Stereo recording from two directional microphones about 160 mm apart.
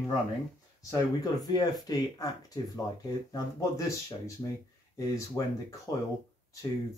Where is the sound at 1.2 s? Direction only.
25° left (ahead or behind).